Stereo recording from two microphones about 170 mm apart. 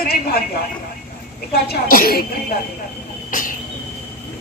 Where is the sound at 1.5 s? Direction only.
65° left (ahead or behind).